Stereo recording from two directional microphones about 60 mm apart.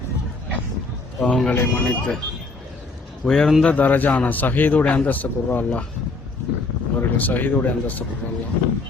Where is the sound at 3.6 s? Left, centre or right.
Left.